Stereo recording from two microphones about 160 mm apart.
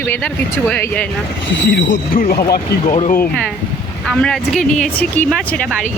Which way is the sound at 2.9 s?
40° left (ahead or behind).